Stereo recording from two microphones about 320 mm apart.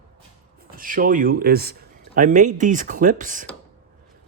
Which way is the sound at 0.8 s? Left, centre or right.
Right.